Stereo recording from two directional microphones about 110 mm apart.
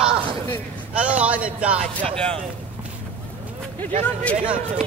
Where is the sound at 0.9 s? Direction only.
10° right (ahead or behind).